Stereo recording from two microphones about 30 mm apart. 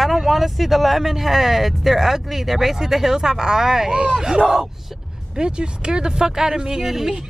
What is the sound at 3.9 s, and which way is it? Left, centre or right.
Speech, right.